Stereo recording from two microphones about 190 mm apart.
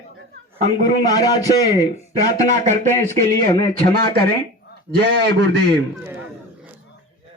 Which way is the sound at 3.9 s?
55° right (ahead or behind).